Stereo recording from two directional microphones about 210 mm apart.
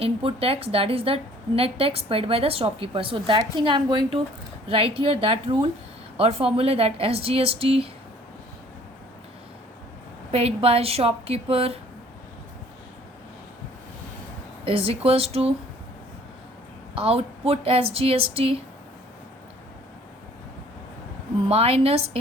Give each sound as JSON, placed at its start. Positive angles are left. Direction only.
{"t": 0.0, "sound": "a woman's voice", "side_deg": -25}
{"t": 10.3, "sound": "a woman's voice", "side_deg": -30}
{"t": 14.6, "sound": "a woman's voice", "side_deg": -25}
{"t": 16.9, "sound": "a woman's voice", "side_deg": -25}
{"t": 21.5, "sound": "a woman's voice", "side_deg": -30}